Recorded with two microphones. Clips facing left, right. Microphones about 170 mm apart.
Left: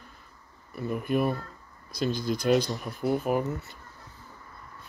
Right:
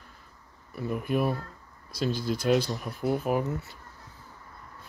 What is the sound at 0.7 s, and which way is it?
Speech, centre (ahead or behind).